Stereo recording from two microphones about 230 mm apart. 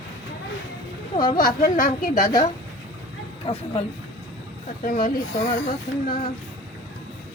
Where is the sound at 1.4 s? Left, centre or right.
Left.